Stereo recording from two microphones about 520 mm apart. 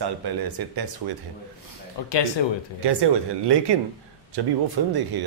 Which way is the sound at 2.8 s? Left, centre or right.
Right.